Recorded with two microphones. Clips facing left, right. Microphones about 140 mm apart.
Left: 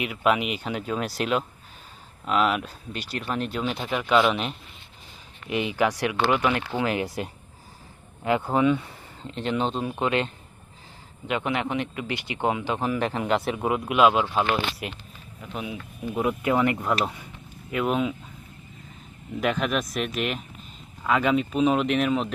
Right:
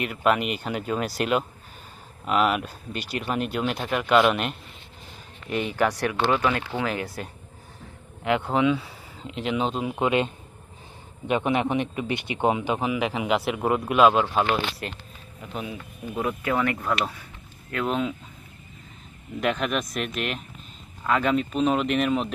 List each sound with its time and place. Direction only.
0.0 s speech: centre (ahead or behind)
5.5 s speech: 10° left (ahead or behind)
8.2 s speech: centre (ahead or behind)
9.8 s speech: 20° right (ahead or behind)
12.8 s speech: 5° right (ahead or behind)
16.1 s speech: 15° left (ahead or behind)
19.4 s speech: centre (ahead or behind)